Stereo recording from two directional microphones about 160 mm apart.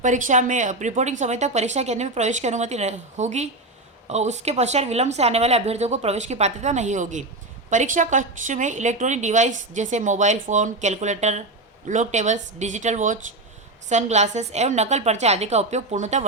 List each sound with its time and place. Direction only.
0.0 s a woman's voice: 50° right (ahead or behind)